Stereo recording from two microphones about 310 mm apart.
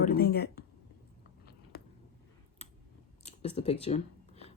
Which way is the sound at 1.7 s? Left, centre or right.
Left.